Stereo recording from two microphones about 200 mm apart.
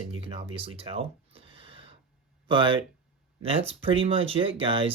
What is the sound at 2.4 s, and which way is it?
Speech, 25° right (ahead or behind).